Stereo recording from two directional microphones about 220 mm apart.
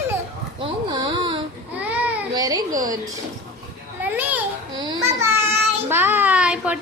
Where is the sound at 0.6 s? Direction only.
20° right (ahead or behind).